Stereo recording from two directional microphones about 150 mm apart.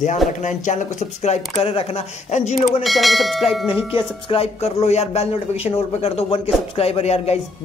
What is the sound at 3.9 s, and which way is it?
Speech, 40° left (ahead or behind).